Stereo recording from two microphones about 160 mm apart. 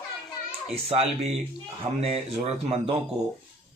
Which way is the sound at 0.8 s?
40° right (ahead or behind).